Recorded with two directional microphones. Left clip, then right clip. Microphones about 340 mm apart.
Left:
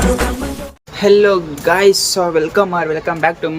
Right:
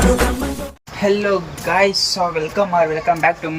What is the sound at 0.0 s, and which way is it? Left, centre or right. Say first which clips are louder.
Music: even; centre.